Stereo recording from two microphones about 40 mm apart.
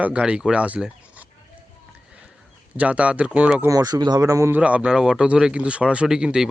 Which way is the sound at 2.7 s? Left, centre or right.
Right.